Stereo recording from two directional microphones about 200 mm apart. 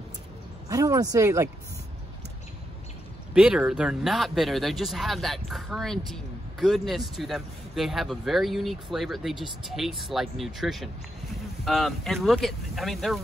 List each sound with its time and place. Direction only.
0.7 s speech: 15° right (ahead or behind)
3.3 s speech: 5° right (ahead or behind)